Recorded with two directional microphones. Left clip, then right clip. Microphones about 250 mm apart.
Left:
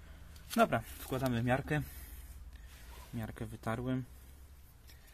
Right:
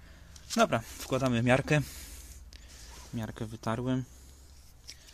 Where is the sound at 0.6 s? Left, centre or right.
Centre.